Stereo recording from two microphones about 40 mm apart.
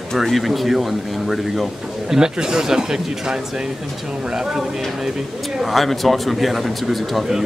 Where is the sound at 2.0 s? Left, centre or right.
Centre.